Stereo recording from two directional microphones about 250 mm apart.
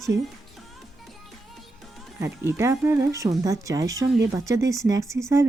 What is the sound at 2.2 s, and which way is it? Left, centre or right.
Speech, centre.